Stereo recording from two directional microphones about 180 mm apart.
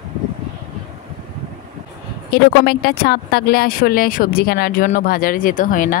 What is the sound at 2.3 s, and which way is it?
Speech, 65° left (ahead or behind).